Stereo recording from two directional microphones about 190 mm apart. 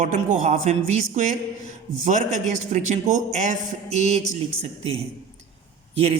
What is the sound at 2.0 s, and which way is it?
A woman's voice, 40° right (ahead or behind).